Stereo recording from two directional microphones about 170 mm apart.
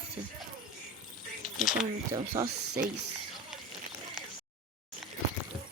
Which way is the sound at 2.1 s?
20° right (ahead or behind).